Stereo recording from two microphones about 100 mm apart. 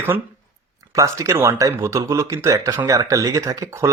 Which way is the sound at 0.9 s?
30° right (ahead or behind).